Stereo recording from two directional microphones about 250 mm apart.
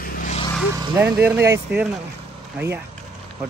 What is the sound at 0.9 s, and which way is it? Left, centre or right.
Speech, centre.